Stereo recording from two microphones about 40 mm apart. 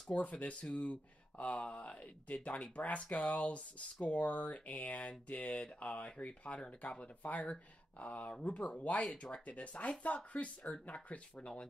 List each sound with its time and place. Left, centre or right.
0.1 s speech: left
11.3 s speech: left